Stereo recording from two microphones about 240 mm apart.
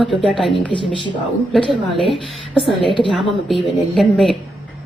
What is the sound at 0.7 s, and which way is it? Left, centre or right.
Speech, left.